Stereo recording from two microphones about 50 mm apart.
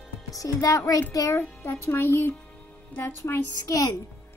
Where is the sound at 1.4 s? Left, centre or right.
Left.